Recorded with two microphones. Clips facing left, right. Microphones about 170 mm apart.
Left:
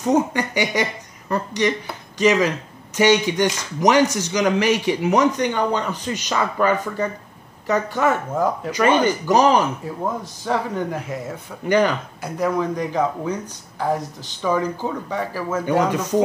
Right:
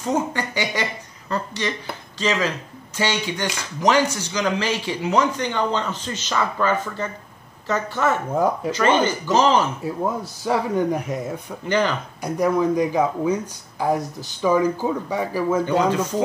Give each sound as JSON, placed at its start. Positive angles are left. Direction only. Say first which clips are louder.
{"t": 0.0, "sound": "speech", "louder": "left 4 dB", "side_deg": 15}
{"t": 10.4, "sound": "speech", "louder": "right 3 dB", "side_deg": -15}
{"t": 12.2, "sound": "speech", "louder": "right 3 dB", "side_deg": -10}
{"t": 15.6, "sound": "speech", "louder": "even", "side_deg": 15}